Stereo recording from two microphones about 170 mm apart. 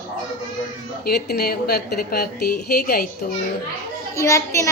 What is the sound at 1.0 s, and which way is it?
A woman's voice, 70° left (ahead or behind).